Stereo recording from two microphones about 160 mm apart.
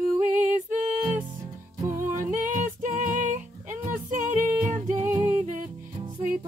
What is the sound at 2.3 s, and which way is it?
Music, 50° right (ahead or behind).